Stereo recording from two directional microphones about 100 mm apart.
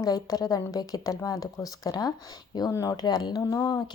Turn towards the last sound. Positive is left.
turn(degrees=35)  # may be behind; listen again after turning